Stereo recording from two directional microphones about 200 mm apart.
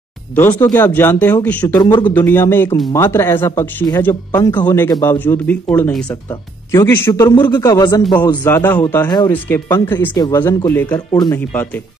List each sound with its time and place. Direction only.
0.4 s speech: 10° left (ahead or behind)
1.8 s speech: 20° left (ahead or behind)
2.2 s speech: 10° left (ahead or behind)
11.1 s speech: 20° left (ahead or behind)
11.3 s speech: 10° left (ahead or behind)